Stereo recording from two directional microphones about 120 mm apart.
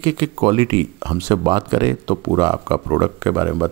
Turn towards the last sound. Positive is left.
turn(degrees=-15)  # may be behind; listen again after turning